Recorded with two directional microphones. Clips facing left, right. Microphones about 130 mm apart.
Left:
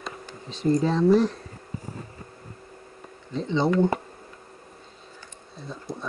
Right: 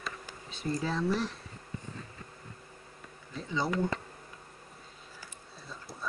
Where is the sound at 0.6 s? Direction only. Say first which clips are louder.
Left 11 dB; 45° left (ahead or behind).